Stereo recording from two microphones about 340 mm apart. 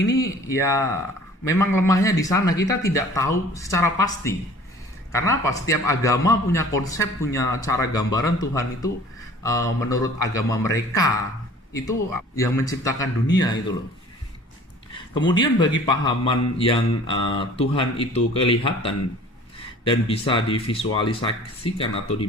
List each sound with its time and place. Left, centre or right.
0.2 s a man's voice: centre
12.4 s a man's voice: centre
15.1 s a man's voice: centre